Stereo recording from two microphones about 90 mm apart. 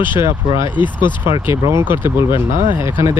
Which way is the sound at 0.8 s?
60° left (ahead or behind).